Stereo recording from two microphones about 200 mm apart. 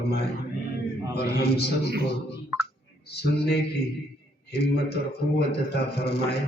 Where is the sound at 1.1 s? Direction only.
55° left (ahead or behind).